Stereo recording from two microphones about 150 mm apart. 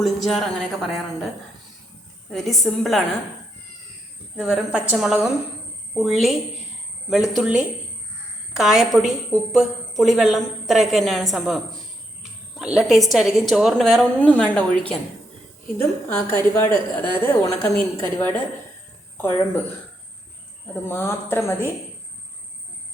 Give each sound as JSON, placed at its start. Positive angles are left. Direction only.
{"t": 0.0, "sound": "a woman's voice", "side_deg": 0}
{"t": 2.3, "sound": "a woman's voice", "side_deg": 0}
{"t": 4.4, "sound": "a woman's voice", "side_deg": -5}
{"t": 20.8, "sound": "a woman's voice", "side_deg": 15}